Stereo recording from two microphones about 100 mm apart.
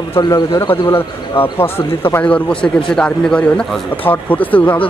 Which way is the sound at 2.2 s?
10° left (ahead or behind).